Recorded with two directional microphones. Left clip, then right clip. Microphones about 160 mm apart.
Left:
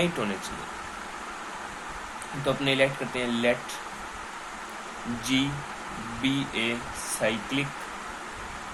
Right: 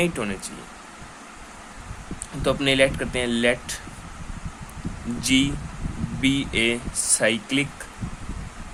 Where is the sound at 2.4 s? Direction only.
90° right.